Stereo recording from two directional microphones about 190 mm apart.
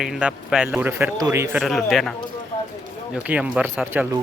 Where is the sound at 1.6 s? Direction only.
Centre (ahead or behind).